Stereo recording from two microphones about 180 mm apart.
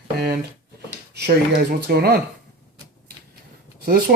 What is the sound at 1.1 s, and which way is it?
Speech, 60° right (ahead or behind).